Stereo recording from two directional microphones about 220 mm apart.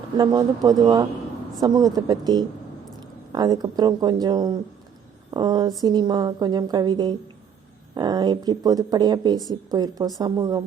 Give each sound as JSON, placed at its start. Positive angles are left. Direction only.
{"t": 0.2, "sound": "a woman's voice", "side_deg": -15}